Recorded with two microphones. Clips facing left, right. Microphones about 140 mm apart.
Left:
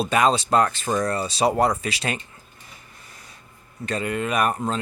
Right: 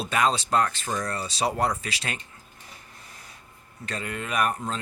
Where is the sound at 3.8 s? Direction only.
15° left (ahead or behind).